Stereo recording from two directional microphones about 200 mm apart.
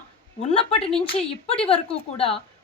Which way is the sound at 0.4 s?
30° left (ahead or behind).